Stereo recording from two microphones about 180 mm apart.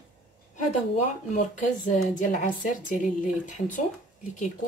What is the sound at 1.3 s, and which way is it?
A woman's voice, 45° left (ahead or behind).